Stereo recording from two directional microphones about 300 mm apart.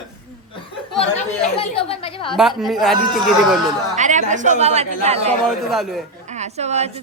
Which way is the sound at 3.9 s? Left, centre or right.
Right.